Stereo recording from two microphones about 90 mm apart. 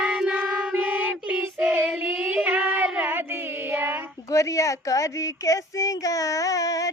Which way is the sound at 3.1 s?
25° right (ahead or behind).